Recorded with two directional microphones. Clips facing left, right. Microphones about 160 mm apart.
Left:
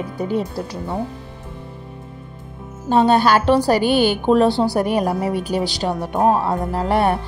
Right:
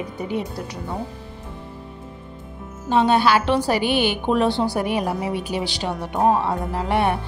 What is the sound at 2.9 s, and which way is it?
A woman's voice, 40° left (ahead or behind).